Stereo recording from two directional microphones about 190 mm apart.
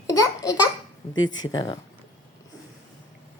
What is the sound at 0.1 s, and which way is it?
Speech, 15° left (ahead or behind).